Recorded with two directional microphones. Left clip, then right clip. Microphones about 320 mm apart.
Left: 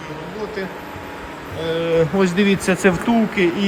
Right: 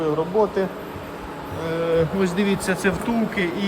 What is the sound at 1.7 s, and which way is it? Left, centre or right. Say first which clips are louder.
Speech: left 3 dB; centre.